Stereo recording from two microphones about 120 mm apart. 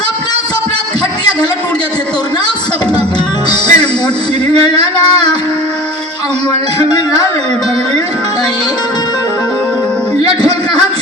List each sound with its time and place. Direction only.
3.5 s music: 35° left (ahead or behind)
6.5 s music: 35° left (ahead or behind)